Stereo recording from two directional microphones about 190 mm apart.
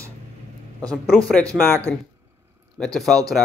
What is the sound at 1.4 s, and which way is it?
Speech, 15° right (ahead or behind).